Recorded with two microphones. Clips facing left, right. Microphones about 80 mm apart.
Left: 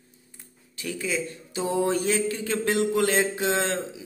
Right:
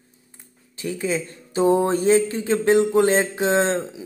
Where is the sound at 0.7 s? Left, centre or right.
Right.